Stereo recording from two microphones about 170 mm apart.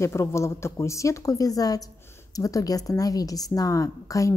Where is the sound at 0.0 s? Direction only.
15° left (ahead or behind).